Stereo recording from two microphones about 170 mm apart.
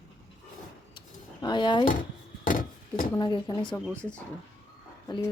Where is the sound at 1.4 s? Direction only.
25° left (ahead or behind).